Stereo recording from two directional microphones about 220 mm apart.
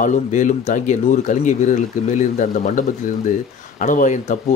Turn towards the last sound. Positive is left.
turn(degrees=35)  # may be behind; listen again after turning